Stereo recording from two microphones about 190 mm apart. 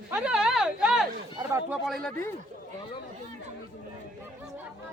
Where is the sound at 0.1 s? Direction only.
5° right (ahead or behind).